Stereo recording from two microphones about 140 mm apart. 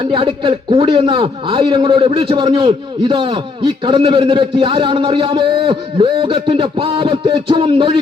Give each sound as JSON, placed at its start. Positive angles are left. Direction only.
{"t": 0.0, "sound": "a man's voice", "side_deg": -40}